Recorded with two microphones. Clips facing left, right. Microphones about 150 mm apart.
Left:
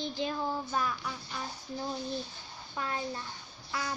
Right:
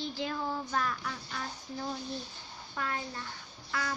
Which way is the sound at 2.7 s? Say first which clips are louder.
Even; 25° left (ahead or behind).